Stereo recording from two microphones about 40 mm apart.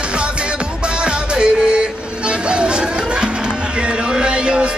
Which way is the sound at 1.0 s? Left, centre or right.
Right.